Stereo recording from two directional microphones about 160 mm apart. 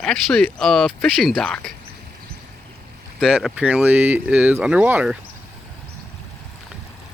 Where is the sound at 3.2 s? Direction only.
5° right (ahead or behind).